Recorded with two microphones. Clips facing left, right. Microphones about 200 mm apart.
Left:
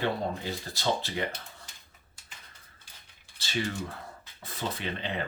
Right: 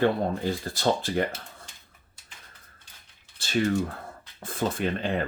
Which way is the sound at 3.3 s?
50° right (ahead or behind).